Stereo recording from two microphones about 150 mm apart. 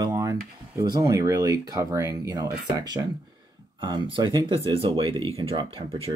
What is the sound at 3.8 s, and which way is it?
Speech, 30° right (ahead or behind).